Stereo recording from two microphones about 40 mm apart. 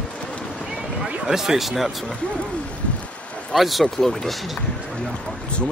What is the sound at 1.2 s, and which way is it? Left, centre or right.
Speech, centre.